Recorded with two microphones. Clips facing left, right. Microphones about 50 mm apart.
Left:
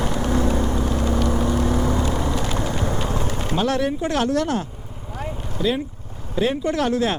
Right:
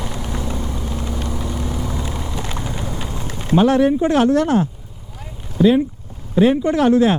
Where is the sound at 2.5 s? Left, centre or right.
Left.